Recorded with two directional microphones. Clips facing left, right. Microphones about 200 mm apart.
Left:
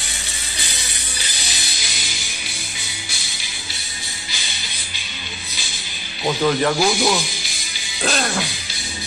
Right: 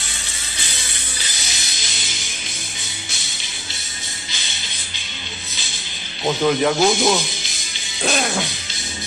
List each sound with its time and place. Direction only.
6.2 s speech: 10° right (ahead or behind)
6.8 s speech: 20° right (ahead or behind)
8.0 s music: centre (ahead or behind)